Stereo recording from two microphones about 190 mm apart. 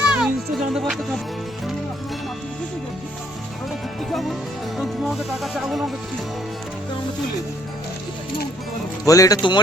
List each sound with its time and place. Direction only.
0.0 s music: 5° right (ahead or behind)
4.1 s music: centre (ahead or behind)
9.0 s speech: 15° left (ahead or behind)